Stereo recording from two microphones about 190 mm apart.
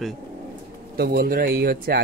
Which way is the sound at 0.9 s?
55° right (ahead or behind).